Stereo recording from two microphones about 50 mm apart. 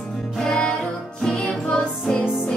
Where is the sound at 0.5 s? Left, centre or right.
Centre.